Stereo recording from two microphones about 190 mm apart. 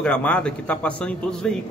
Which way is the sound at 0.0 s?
5° left (ahead or behind).